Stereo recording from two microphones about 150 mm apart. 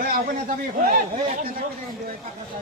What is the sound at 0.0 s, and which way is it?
A man's voice, 70° right (ahead or behind).